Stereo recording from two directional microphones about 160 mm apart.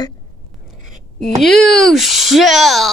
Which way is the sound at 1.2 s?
Centre (ahead or behind).